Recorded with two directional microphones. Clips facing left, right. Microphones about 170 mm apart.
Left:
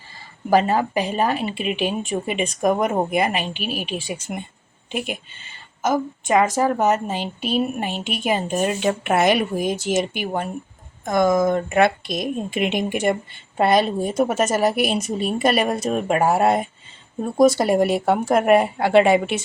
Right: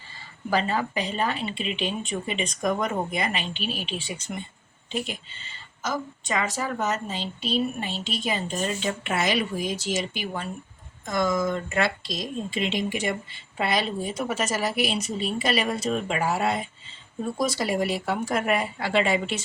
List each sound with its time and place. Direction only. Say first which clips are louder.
0.5 s speech: left 7 dB; 45° left (ahead or behind)
3.5 s a woman's voice: left 4 dB; 10° left (ahead or behind)
3.9 s speech: left 5 dB; 45° left (ahead or behind)
7.2 s a woman's voice: left 4 dB; 10° left (ahead or behind)
7.8 s speech: left 5 dB; 50° left (ahead or behind)